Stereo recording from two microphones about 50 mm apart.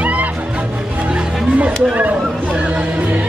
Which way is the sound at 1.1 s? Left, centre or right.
Right.